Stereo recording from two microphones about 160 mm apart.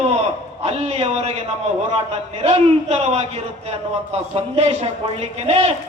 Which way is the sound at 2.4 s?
40° right (ahead or behind).